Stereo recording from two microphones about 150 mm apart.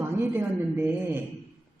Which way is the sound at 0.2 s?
15° right (ahead or behind).